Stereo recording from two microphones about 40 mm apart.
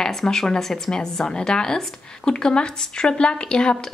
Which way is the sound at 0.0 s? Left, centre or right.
Centre.